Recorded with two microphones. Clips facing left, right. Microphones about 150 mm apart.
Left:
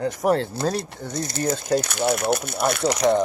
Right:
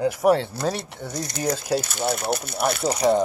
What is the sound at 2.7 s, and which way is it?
Speech, 90° left.